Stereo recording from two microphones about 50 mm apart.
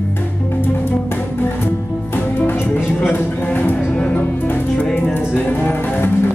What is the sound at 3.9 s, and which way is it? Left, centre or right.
Music, left.